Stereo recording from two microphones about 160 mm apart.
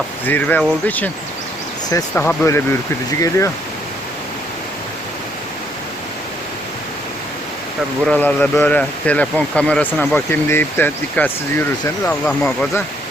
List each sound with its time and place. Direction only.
0.3 s speech: 10° left (ahead or behind)
2.1 s speech: 15° left (ahead or behind)
8.0 s speech: 5° left (ahead or behind)